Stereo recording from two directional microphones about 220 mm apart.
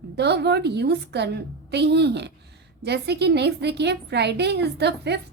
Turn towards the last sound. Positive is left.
turn(degrees=-50)  # may be behind; listen again after turning